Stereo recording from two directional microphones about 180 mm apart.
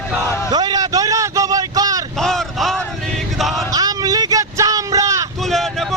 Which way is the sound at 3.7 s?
20° right (ahead or behind).